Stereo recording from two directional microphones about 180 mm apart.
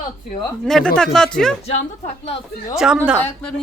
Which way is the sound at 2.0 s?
35° left (ahead or behind).